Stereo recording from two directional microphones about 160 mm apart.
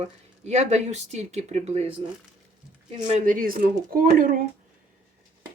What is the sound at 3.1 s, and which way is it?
Speech, 55° right (ahead or behind).